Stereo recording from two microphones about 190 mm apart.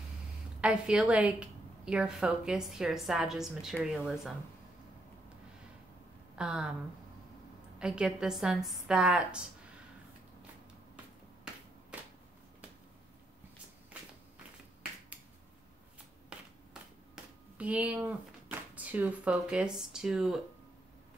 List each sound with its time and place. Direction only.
0.6 s a woman's voice: 5° right (ahead or behind)
6.3 s speech: 5° right (ahead or behind)
7.8 s a woman's voice: 5° right (ahead or behind)
16.3 s finger snapping: 5° right (ahead or behind)
17.1 s speech: 5° right (ahead or behind)